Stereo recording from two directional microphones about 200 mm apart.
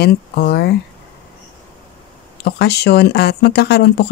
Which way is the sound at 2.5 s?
55° left (ahead or behind).